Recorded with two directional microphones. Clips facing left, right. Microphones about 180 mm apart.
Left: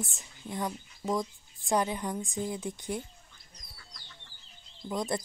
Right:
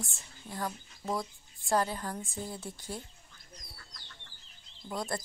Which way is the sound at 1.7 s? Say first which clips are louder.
Left 1 dB; 15° left (ahead or behind).